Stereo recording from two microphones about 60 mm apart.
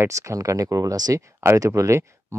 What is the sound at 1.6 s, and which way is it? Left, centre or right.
Speech, right.